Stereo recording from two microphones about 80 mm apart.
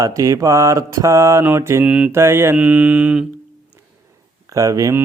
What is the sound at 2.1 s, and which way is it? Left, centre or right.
Mantra, right.